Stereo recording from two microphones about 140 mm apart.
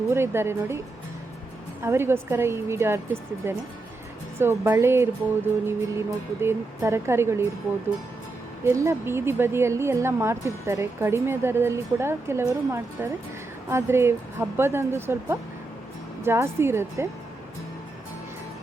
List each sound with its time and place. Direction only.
0.1 s a woman's voice: 15° right (ahead or behind)
1.8 s a woman's voice: 15° right (ahead or behind)
8.6 s a woman's voice: 20° right (ahead or behind)